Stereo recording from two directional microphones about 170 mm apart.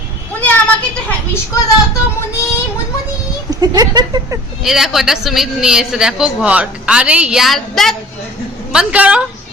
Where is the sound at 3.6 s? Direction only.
25° right (ahead or behind).